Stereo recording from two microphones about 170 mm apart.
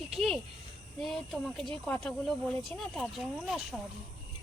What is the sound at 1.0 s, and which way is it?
Speech, centre (ahead or behind).